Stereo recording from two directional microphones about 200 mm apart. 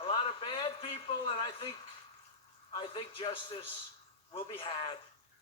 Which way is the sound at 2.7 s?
25° left (ahead or behind).